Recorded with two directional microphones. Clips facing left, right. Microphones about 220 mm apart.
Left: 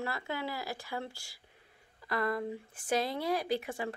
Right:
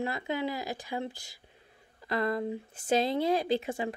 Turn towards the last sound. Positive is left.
turn(degrees=-25)  # may be behind; listen again after turning